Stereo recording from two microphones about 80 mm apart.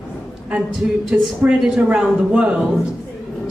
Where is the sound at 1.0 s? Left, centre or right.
Centre.